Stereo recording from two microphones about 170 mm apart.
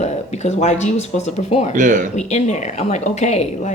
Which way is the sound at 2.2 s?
40° left (ahead or behind).